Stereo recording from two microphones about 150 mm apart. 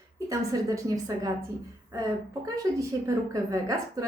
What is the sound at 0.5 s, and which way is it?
Speech, 25° right (ahead or behind).